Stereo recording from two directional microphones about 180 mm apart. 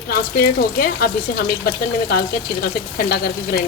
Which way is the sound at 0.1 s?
60° left (ahead or behind).